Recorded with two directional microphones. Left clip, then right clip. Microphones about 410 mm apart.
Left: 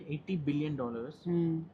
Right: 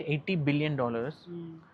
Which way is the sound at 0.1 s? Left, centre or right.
Right.